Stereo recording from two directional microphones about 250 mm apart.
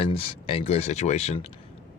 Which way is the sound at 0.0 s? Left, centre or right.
Left.